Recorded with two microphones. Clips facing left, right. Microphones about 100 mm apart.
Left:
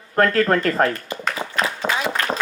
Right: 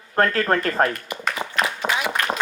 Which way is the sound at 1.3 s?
30° left (ahead or behind).